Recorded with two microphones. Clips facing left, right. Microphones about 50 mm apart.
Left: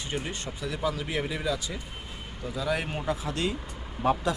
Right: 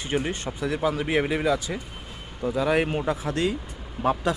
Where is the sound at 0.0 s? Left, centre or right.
Right.